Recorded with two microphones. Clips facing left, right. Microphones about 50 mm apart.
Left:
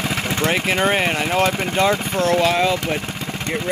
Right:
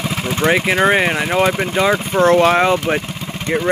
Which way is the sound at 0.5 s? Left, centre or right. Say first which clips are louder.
Right 5 dB; right.